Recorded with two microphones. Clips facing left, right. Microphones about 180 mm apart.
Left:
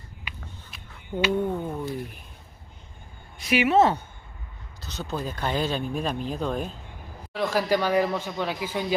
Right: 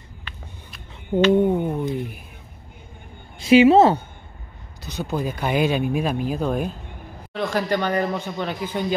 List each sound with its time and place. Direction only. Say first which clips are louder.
0.3 s a sound: even; 15° left (ahead or behind)
1.3 s speech: right 8 dB; 20° right (ahead or behind)
3.3 s a woman's voice: right 8 dB; 25° right (ahead or behind)
4.8 s speech: right 6 dB; 10° right (ahead or behind)
7.3 s speech: right 1 dB; 5° left (ahead or behind)